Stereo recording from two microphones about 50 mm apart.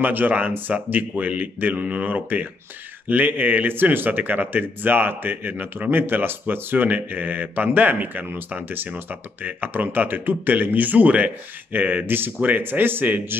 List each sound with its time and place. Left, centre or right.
0.0 s a man's voice: right